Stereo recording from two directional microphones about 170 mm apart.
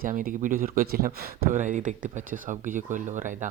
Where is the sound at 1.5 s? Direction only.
45° right (ahead or behind).